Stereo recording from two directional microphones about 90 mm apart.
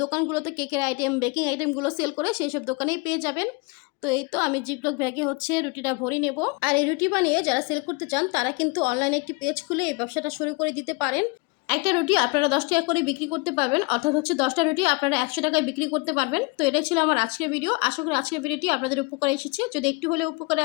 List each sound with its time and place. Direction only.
0.0 s speech: 35° right (ahead or behind)
1.8 s speech: 30° right (ahead or behind)
5.0 s speech: 20° right (ahead or behind)
6.6 s a woman's voice: 65° right (ahead or behind); by 11.3 s 45° right (ahead or behind)
11.7 s a woman's voice: 75° right (ahead or behind)